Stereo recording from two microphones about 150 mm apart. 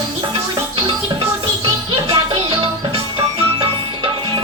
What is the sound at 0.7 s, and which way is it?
Music, 40° right (ahead or behind).